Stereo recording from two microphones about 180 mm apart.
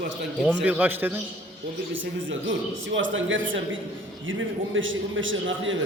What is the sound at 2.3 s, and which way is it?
A man's voice, 90° right.